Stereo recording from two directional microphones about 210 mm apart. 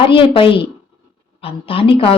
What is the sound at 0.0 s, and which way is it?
Speech, 25° left (ahead or behind).